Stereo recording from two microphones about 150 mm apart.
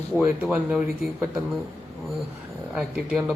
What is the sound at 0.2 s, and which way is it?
Speech, 5° right (ahead or behind).